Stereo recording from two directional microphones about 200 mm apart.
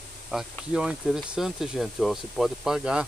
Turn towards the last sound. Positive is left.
turn(degrees=-5)  # may be behind; listen again after turning